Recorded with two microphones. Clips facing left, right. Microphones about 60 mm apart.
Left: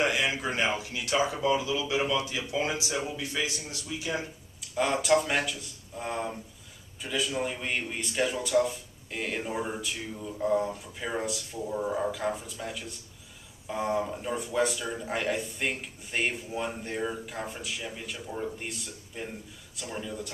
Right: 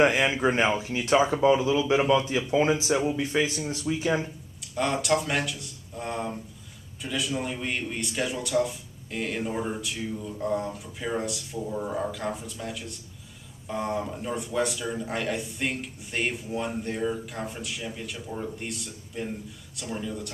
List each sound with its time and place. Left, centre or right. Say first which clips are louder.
0.0 s speech: right 6 dB; right
4.7 s a man's voice: left 1 dB; centre